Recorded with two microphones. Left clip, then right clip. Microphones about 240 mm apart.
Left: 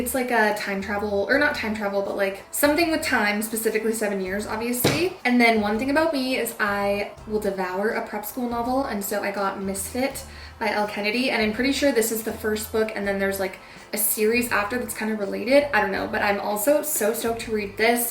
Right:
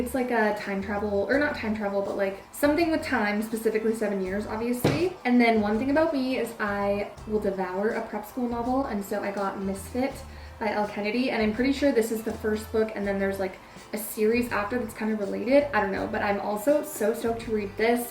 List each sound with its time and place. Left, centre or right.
0.1 s speech: centre
1.0 s speech: right
1.3 s speech: centre